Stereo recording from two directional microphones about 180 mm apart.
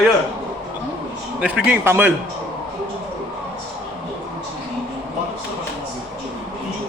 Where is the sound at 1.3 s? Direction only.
5° right (ahead or behind).